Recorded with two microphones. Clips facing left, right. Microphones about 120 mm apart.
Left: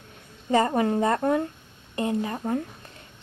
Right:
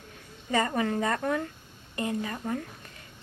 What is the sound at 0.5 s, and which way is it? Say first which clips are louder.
A woman's voice: left 5 dB; 30° left (ahead or behind).